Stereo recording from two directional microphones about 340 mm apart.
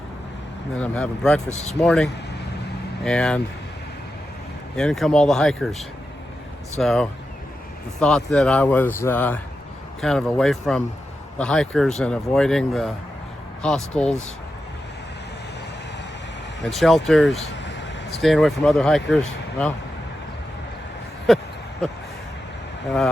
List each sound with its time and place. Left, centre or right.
0.8 s speech: centre
1.5 s speech: centre
1.8 s speech: centre
4.8 s speech: centre
6.7 s speech: centre
16.6 s speech: centre
17.6 s vehicle: left
18.2 s speech: centre
21.3 s speech: centre